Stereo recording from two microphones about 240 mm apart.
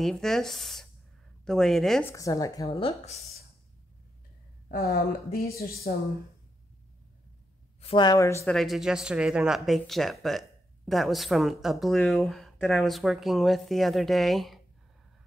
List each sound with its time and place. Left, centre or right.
0.0 s speech: centre
2.1 s speech: centre
4.6 s speech: left
7.8 s speech: centre
8.5 s speech: centre